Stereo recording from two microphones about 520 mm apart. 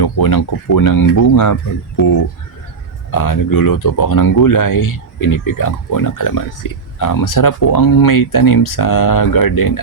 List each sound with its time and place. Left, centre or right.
0.0 s speech: left